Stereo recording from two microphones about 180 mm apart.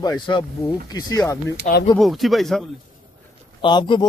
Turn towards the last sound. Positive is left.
turn(degrees=25)  # may be behind; listen again after turning